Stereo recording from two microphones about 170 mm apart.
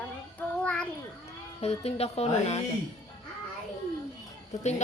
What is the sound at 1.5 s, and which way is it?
Speech, 40° left (ahead or behind).